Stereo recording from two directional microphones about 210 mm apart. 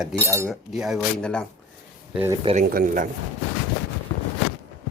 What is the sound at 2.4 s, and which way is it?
Speech, 25° right (ahead or behind).